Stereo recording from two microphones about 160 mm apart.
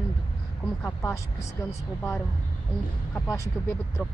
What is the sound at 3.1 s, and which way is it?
Speech, 15° left (ahead or behind).